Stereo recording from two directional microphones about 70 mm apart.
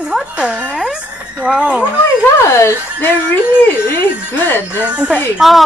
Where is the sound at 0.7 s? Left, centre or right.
Centre.